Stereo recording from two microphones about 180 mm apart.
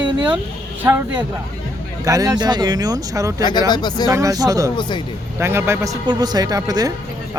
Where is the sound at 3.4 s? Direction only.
25° left (ahead or behind).